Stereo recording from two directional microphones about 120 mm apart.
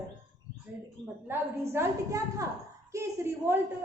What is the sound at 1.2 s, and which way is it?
A woman's voice, 20° right (ahead or behind).